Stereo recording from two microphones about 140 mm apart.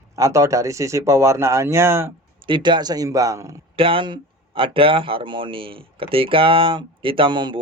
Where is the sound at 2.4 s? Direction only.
35° right (ahead or behind).